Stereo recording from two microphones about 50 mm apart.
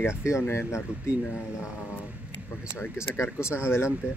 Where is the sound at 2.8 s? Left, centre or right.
Left.